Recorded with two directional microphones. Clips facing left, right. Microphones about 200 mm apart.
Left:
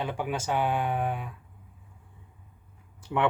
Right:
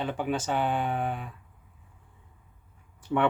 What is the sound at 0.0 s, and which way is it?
Speech, 10° left (ahead or behind).